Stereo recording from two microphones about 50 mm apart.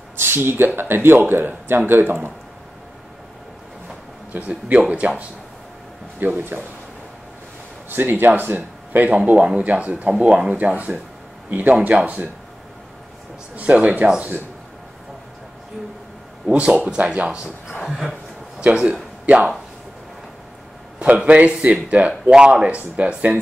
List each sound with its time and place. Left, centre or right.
0.2 s speech: right
4.3 s speech: right
6.1 s speech: right
7.9 s speech: right
9.1 s speech: right
13.6 s speech: right
16.5 s speech: right
17.8 s speech: centre
18.6 s speech: right
21.0 s speech: right